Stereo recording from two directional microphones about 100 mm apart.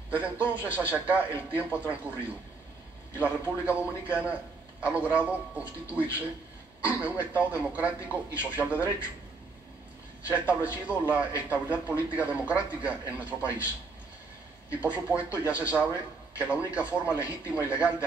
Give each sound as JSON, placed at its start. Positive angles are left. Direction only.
{"t": 0.1, "sound": "a man's voice", "side_deg": -15}
{"t": 3.2, "sound": "a man's voice", "side_deg": -15}
{"t": 10.2, "sound": "a man's voice", "side_deg": -15}
{"t": 14.8, "sound": "a man's voice", "side_deg": -15}